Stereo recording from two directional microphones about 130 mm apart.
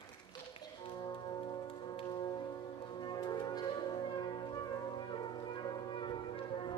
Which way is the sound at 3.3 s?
35° left (ahead or behind).